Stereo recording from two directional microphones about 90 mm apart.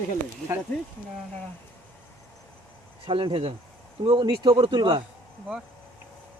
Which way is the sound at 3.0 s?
70° right (ahead or behind).